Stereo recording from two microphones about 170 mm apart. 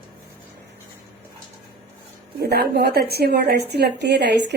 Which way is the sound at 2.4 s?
70° right (ahead or behind).